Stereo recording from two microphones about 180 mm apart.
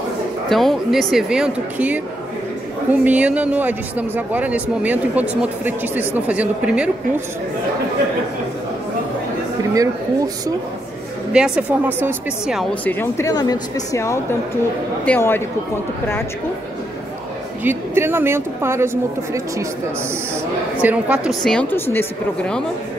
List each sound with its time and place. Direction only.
0.5 s a woman's voice: centre (ahead or behind)
9.8 s speech: 20° right (ahead or behind)
11.3 s a woman's voice: 5° right (ahead or behind)
12.8 s speech: 15° left (ahead or behind)
17.6 s speech: 10° right (ahead or behind)
20.8 s a woman's voice: 5° right (ahead or behind); by 22.6 s 10° left (ahead or behind)